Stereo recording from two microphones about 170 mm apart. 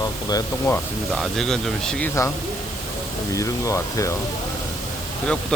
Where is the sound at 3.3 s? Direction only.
20° left (ahead or behind).